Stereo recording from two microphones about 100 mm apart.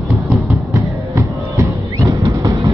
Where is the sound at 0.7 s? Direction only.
30° right (ahead or behind).